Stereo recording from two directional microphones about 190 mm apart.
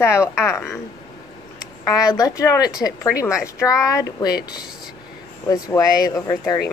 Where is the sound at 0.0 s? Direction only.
15° left (ahead or behind).